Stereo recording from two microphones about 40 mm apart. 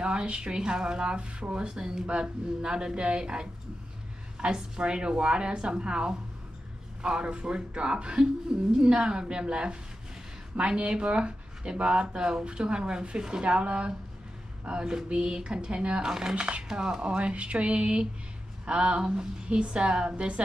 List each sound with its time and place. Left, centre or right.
0.0 s speech: right
16.1 s speech: centre